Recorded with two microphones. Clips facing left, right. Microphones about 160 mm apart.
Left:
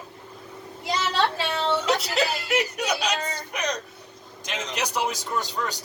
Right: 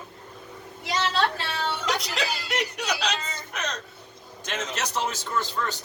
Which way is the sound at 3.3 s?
15° left (ahead or behind).